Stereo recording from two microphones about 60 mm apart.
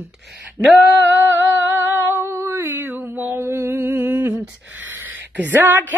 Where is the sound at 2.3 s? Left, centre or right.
Right.